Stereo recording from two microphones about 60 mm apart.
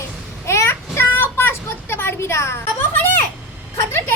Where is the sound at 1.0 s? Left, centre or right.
Left.